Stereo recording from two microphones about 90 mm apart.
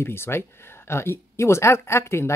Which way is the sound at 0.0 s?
25° left (ahead or behind).